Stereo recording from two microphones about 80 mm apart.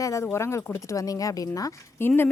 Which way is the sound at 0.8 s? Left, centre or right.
Left.